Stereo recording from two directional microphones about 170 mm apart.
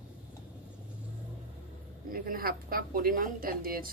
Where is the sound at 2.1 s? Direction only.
60° right (ahead or behind).